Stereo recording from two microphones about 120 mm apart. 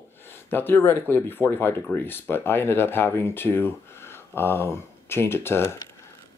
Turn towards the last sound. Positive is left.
turn(degrees=20)  # may be behind; listen again after turning